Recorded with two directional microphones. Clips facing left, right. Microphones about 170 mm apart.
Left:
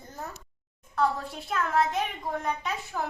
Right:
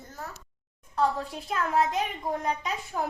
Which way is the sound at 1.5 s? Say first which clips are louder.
Even; 10° right (ahead or behind).